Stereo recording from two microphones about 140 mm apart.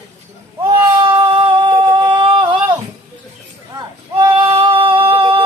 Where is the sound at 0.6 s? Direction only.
25° right (ahead or behind).